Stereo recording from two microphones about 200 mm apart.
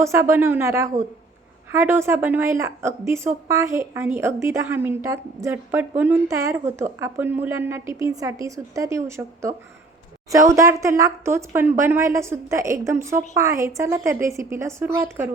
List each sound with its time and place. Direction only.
0.0 s a woman's voice: 15° right (ahead or behind)